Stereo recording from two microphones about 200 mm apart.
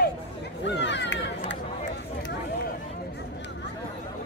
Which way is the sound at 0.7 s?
60° left (ahead or behind).